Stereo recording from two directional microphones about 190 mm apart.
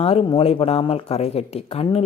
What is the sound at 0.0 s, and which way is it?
A woman's voice, 30° left (ahead or behind).